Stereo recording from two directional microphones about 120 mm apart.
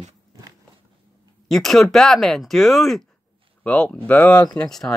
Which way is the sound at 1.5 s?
5° left (ahead or behind).